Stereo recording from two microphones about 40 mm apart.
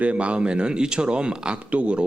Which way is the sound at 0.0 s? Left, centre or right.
Right.